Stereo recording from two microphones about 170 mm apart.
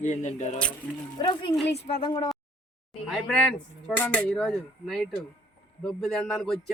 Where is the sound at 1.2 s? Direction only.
30° left (ahead or behind).